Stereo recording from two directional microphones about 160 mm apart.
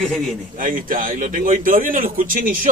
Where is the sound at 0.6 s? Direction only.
55° right (ahead or behind).